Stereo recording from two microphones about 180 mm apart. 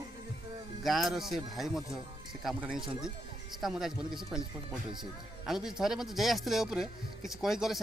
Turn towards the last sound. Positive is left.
turn(degrees=0)  # may be behind; listen again after turning